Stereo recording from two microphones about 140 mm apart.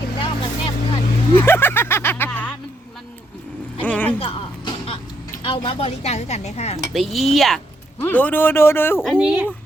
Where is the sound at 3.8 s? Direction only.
10° left (ahead or behind).